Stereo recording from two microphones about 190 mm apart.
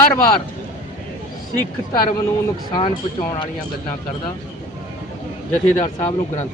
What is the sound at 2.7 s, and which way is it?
Speech, 25° left (ahead or behind).